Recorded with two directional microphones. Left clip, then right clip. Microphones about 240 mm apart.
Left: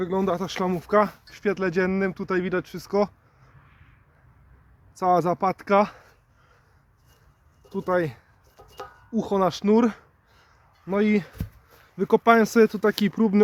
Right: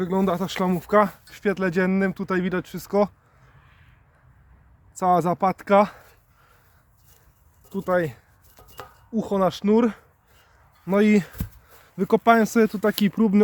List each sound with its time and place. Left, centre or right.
0.0 s speech: right; by 3.1 s centre
4.9 s speech: centre
7.7 s speech: centre
8.6 s a sound: centre
9.1 s speech: centre
10.8 s speech: right
11.9 s speech: centre